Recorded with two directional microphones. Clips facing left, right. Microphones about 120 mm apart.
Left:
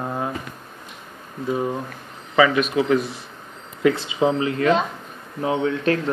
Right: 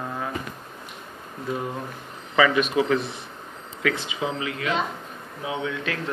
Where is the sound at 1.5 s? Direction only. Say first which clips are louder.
Left 6 dB; 25° left (ahead or behind).